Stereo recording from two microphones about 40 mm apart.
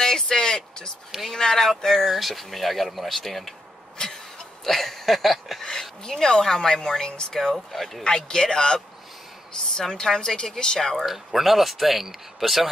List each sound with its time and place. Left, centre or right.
0.3 s a sound: centre
1.3 s speech: centre
2.0 s speech: centre
4.6 s speech: centre
5.6 s speech: centre
7.5 s speech: centre
11.1 s speech: centre